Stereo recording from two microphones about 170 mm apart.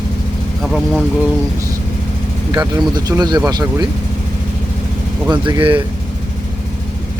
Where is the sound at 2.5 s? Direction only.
20° right (ahead or behind).